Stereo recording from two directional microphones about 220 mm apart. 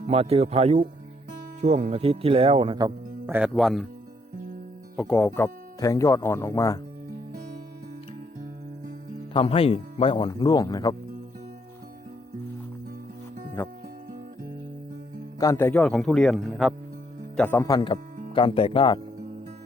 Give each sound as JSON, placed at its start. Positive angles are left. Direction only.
{"t": 0.1, "sound": "speech", "side_deg": -25}
{"t": 4.9, "sound": "speech", "side_deg": 5}
{"t": 7.3, "sound": "music", "side_deg": -35}
{"t": 9.3, "sound": "speech", "side_deg": 25}
{"t": 13.6, "sound": "speech", "side_deg": 10}
{"t": 15.4, "sound": "speech", "side_deg": 15}